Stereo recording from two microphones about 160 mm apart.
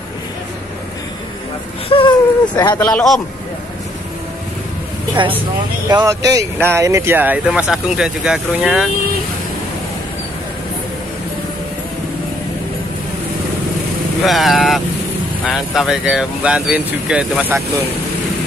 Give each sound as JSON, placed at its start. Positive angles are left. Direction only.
{"t": 1.9, "sound": "speech", "side_deg": 30}
{"t": 2.8, "sound": "speech", "side_deg": 5}
{"t": 5.9, "sound": "speech", "side_deg": -25}
{"t": 14.2, "sound": "speech", "side_deg": 0}